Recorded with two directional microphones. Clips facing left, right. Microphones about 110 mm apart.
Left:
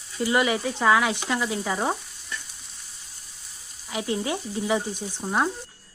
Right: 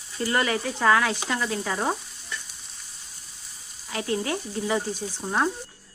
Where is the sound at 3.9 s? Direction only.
15° left (ahead or behind).